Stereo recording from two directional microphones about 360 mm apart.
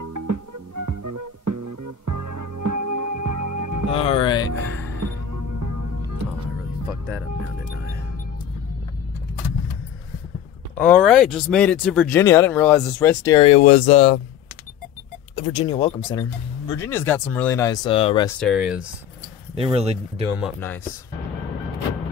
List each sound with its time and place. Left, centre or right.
0.0 s music: right
3.9 s speech: centre
5.0 s music: right
10.8 s speech: centre
15.3 s speech: centre
18.4 s speech: centre
19.5 s speech: centre
20.3 s speech: centre